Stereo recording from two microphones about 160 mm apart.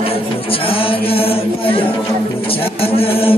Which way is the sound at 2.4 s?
35° left (ahead or behind).